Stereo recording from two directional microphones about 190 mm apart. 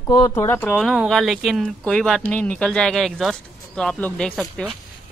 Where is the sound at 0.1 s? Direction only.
20° left (ahead or behind).